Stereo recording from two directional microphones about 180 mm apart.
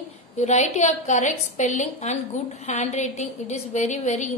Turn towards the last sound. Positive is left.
turn(degrees=40)  # may be behind; listen again after turning